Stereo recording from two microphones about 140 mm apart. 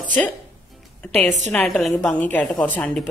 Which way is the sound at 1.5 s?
10° left (ahead or behind).